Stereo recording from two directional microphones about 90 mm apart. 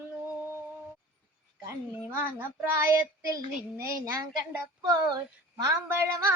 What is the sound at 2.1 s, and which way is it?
Female singing, 25° right (ahead or behind).